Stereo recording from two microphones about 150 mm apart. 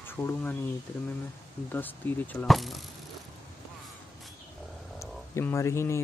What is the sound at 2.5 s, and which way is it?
Speech, centre (ahead or behind).